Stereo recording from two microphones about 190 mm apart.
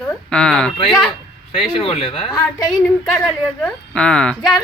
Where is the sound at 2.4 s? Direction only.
20° left (ahead or behind).